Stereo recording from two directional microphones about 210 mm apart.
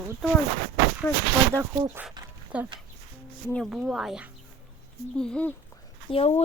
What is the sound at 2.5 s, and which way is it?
Speech, 5° right (ahead or behind).